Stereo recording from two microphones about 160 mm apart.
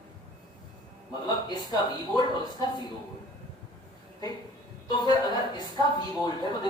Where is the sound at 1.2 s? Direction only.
25° left (ahead or behind).